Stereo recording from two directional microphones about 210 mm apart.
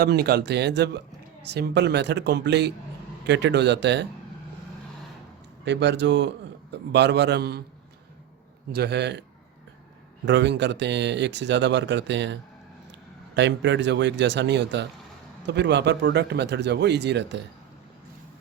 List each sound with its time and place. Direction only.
0.0 s speech: 50° right (ahead or behind)
5.6 s speech: 55° right (ahead or behind)
8.7 s speech: 50° right (ahead or behind)
10.2 s speech: 55° right (ahead or behind)